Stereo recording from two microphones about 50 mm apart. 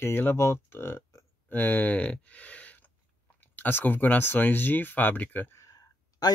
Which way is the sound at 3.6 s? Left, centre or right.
Left.